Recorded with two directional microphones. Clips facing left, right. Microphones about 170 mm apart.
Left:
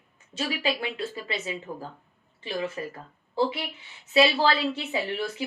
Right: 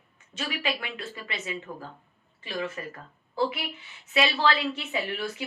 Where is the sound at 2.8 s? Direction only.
25° left (ahead or behind).